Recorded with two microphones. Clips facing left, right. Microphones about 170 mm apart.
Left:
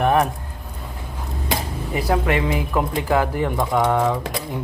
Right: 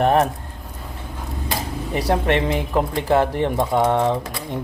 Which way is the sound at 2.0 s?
30° right (ahead or behind).